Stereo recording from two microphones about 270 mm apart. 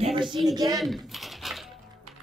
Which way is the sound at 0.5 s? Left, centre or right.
Centre.